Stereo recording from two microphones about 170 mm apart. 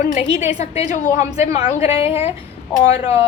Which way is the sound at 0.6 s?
40° left (ahead or behind).